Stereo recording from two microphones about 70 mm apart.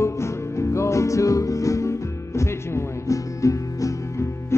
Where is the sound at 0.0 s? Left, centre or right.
Left.